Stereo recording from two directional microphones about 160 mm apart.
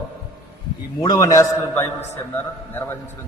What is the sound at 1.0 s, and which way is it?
Speech, 25° left (ahead or behind).